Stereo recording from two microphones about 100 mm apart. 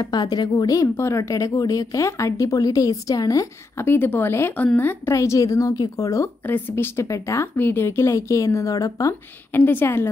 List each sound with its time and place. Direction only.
0.0 s a woman's voice: 45° left (ahead or behind)
3.8 s a woman's voice: 20° left (ahead or behind)
6.4 s a woman's voice: 20° left (ahead or behind)
9.5 s speech: 20° left (ahead or behind)